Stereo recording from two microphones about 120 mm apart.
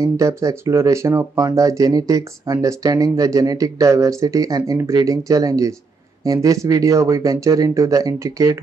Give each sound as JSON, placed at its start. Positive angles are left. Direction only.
{"t": 0.0, "sound": "speech", "side_deg": -25}